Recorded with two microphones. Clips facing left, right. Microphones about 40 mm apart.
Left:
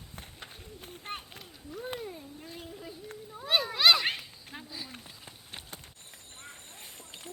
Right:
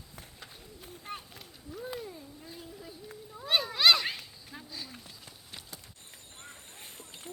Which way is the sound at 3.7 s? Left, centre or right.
Centre.